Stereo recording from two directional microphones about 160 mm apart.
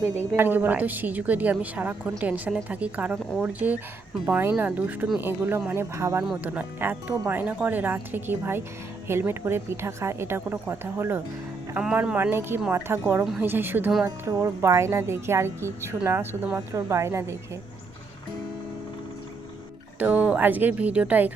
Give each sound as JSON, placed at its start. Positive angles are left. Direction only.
{"t": 0.0, "sound": "a woman's voice", "side_deg": 40}
{"t": 0.3, "sound": "speech", "side_deg": -10}
{"t": 13.2, "sound": "speech", "side_deg": -5}
{"t": 20.0, "sound": "speech", "side_deg": -10}